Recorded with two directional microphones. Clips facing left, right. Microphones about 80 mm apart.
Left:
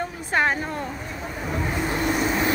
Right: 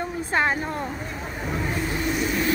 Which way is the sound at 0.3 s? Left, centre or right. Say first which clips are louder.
Left 1 dB; right.